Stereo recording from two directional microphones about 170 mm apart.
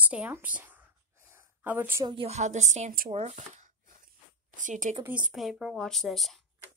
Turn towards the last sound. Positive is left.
turn(degrees=0)  # may be behind; listen again after turning